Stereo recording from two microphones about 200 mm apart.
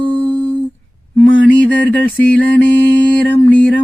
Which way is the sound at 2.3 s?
5° left (ahead or behind).